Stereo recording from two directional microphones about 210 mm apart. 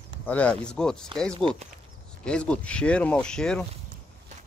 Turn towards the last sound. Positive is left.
turn(degrees=5)  # may be behind; listen again after turning